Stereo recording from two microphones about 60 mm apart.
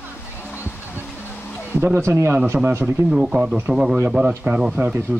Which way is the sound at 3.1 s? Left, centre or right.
Centre.